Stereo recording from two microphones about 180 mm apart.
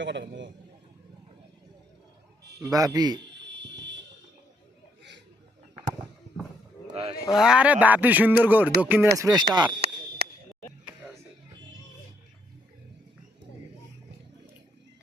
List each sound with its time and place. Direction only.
0.0 s a man's voice: 85° right
2.6 s speech: 20° right (ahead or behind)
3.4 s music: 80° right
6.9 s speech: 35° right (ahead or behind)
7.3 s a man's voice: 5° right (ahead or behind); by 9.7 s 25° right (ahead or behind)
10.2 s a sound: 60° right (ahead or behind)